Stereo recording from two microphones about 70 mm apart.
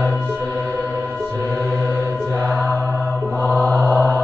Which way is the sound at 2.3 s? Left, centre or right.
Right.